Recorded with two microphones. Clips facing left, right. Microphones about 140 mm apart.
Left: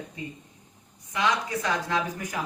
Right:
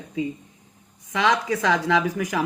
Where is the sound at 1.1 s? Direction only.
90° right.